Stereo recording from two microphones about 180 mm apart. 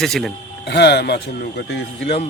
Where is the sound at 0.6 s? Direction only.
65° left (ahead or behind).